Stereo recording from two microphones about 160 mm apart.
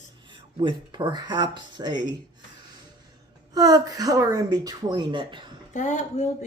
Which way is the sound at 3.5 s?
25° right (ahead or behind).